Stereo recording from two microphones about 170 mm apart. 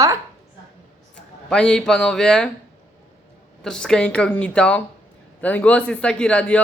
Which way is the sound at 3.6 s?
5° left (ahead or behind).